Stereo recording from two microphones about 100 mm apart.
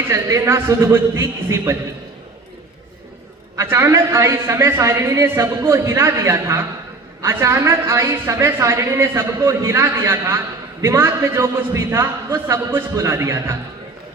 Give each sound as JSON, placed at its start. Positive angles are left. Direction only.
{"t": 0.1, "sound": "a woman's voice", "side_deg": -30}
{"t": 3.6, "sound": "a woman's voice", "side_deg": -25}